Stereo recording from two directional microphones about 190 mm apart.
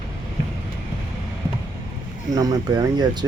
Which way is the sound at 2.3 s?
20° right (ahead or behind).